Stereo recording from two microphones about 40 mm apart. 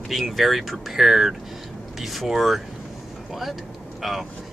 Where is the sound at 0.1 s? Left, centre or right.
Centre.